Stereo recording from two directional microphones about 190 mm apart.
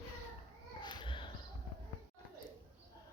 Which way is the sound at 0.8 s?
25° left (ahead or behind).